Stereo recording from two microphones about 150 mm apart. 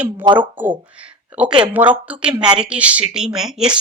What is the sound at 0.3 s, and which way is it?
A woman's voice, 10° right (ahead or behind).